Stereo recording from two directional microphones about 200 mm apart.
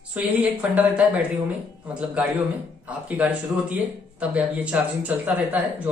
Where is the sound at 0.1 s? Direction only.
10° right (ahead or behind).